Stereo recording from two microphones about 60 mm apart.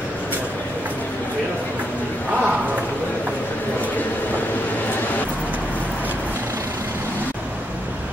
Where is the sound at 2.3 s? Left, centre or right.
Right.